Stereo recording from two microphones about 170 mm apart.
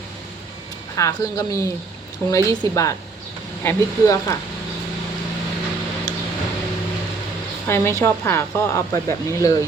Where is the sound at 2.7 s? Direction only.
20° left (ahead or behind).